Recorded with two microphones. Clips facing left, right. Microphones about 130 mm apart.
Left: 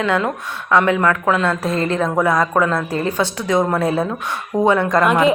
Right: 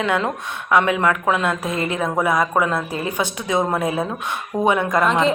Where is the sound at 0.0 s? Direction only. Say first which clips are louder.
Left 2 dB; 20° right (ahead or behind).